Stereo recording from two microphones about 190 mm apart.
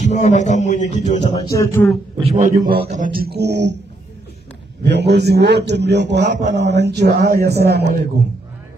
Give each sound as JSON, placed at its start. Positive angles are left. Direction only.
{"t": 0.0, "sound": "a man's voice", "side_deg": 40}
{"t": 1.3, "sound": "a sound", "side_deg": 15}
{"t": 2.2, "sound": "speech", "side_deg": -40}
{"t": 4.8, "sound": "a man's voice", "side_deg": -60}